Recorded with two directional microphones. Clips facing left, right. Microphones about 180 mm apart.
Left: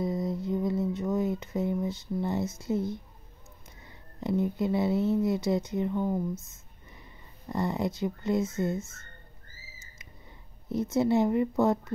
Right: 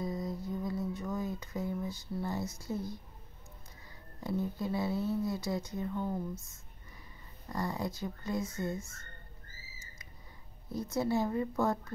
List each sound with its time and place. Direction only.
0.0 s mantra: 25° left (ahead or behind)
3.8 s speech: 20° left (ahead or behind)
7.4 s speech: 25° left (ahead or behind)
10.7 s speech: 20° left (ahead or behind)